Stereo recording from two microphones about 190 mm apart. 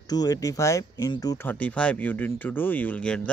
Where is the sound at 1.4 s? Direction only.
10° left (ahead or behind).